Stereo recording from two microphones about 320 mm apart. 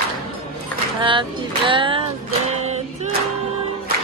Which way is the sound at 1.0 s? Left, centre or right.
Centre.